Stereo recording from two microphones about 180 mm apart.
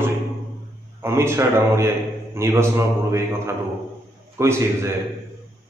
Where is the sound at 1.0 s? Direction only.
15° right (ahead or behind).